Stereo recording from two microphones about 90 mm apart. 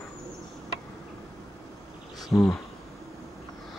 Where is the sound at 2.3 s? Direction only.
25° left (ahead or behind).